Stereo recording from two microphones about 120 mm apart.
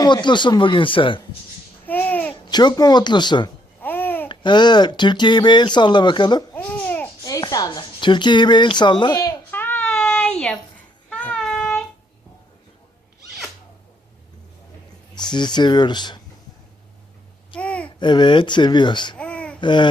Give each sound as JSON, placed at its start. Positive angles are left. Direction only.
{"t": 0.0, "sound": "speech", "side_deg": 40}
{"t": 1.9, "sound": "babbling", "side_deg": 15}
{"t": 2.3, "sound": "a woman's voice", "side_deg": 35}
{"t": 3.8, "sound": "babbling", "side_deg": 15}
{"t": 4.3, "sound": "speech", "side_deg": 40}
{"t": 6.5, "sound": "babbling", "side_deg": 15}
{"t": 7.3, "sound": "speech", "side_deg": 30}
{"t": 9.3, "sound": "a sound", "side_deg": 15}
{"t": 11.1, "sound": "child singing", "side_deg": 10}
{"t": 15.1, "sound": "speech", "side_deg": 35}
{"t": 17.5, "sound": "a sound", "side_deg": 10}
{"t": 18.0, "sound": "speech", "side_deg": 40}
{"t": 19.1, "sound": "babbling", "side_deg": 10}
{"t": 19.5, "sound": "babbling", "side_deg": 40}